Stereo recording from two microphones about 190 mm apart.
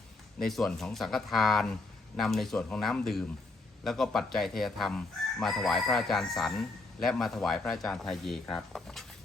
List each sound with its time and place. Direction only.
0.4 s chicken: centre (ahead or behind)